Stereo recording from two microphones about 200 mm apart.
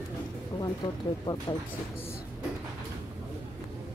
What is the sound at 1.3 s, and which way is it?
Speech, 15° left (ahead or behind).